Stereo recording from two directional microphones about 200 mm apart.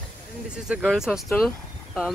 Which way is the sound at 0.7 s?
5° right (ahead or behind).